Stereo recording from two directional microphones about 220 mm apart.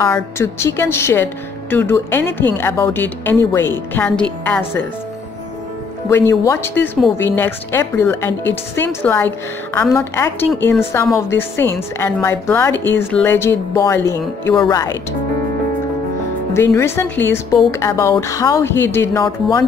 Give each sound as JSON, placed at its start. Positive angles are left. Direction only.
{"t": 0.0, "sound": "speech", "side_deg": 10}
{"t": 6.0, "sound": "speech", "side_deg": 10}
{"t": 16.5, "sound": "speech", "side_deg": 10}